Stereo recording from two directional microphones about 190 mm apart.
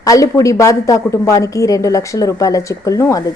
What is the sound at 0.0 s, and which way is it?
A woman's voice, 15° left (ahead or behind).